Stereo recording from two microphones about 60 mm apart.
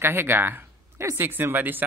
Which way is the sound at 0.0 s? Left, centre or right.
Right.